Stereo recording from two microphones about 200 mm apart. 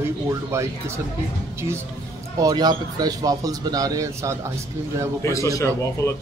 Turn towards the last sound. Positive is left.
turn(degrees=15)  # may be behind; listen again after turning